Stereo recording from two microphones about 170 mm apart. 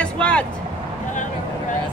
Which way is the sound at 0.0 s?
5° left (ahead or behind).